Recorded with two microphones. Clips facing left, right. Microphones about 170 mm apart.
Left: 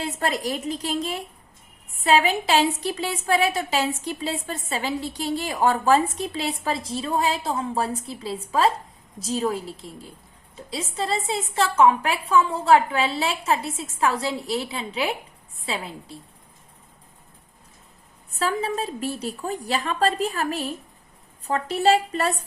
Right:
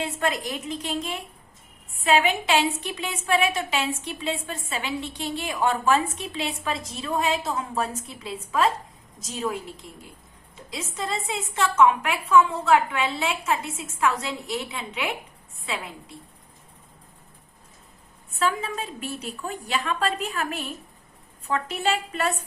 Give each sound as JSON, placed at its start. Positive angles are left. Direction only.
{"t": 0.0, "sound": "a woman's voice", "side_deg": 35}
{"t": 18.3, "sound": "a woman's voice", "side_deg": 35}